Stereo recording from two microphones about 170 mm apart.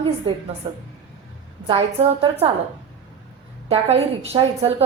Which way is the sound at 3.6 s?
35° right (ahead or behind).